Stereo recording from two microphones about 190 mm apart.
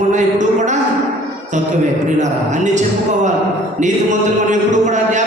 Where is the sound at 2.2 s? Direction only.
40° right (ahead or behind).